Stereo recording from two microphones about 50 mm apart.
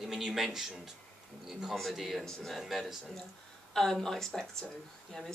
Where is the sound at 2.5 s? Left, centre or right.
Centre.